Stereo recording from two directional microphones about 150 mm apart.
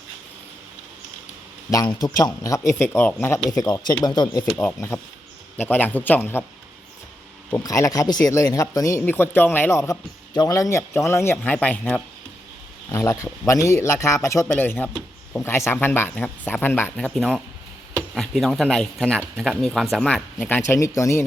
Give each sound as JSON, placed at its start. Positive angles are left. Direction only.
{"t": 1.7, "sound": "speech", "side_deg": 25}
{"t": 4.5, "sound": "speech", "side_deg": 15}
{"t": 7.5, "sound": "speech", "side_deg": 20}
{"t": 17.2, "sound": "speech", "side_deg": 0}